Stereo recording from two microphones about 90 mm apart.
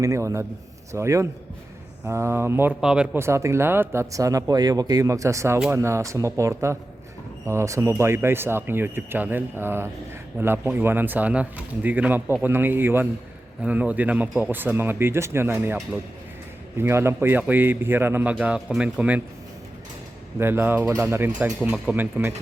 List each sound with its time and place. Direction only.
0.0 s speech: 35° right (ahead or behind)
2.8 s speech: 10° right (ahead or behind)
3.2 s speech: 30° right (ahead or behind)
4.1 s speech: 40° right (ahead or behind); by 19.2 s 15° right (ahead or behind)
20.4 s speech: 25° right (ahead or behind)
21.3 s speech: 15° right (ahead or behind)